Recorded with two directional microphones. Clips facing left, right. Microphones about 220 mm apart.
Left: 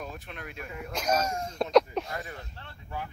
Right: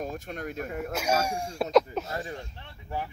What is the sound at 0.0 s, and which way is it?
Speech, 45° right (ahead or behind).